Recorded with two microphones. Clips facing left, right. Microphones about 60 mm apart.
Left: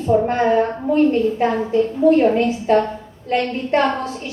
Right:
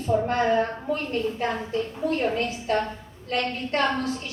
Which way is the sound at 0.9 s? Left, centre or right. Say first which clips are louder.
Left 14 dB; left.